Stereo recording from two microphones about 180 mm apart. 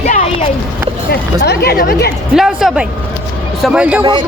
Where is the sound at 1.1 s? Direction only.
60° left (ahead or behind).